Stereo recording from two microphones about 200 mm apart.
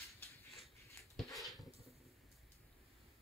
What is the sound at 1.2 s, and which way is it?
Dog, centre (ahead or behind).